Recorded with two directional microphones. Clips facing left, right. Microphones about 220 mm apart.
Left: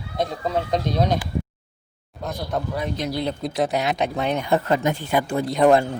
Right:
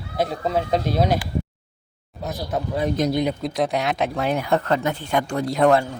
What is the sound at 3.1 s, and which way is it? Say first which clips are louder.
Speech: right 4 dB; 15° right (ahead or behind).